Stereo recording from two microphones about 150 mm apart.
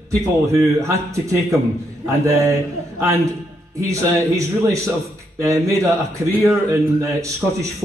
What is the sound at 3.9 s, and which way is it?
A man's voice, 20° right (ahead or behind).